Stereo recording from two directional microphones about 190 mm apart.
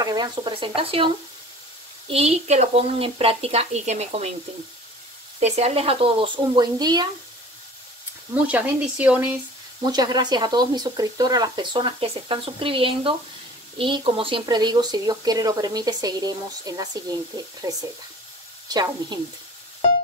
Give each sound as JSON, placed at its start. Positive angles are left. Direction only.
{"t": 0.0, "sound": "a woman's voice", "side_deg": -20}
{"t": 5.4, "sound": "speech", "side_deg": -35}
{"t": 8.4, "sound": "speech", "side_deg": -5}
{"t": 9.8, "sound": "speech", "side_deg": -20}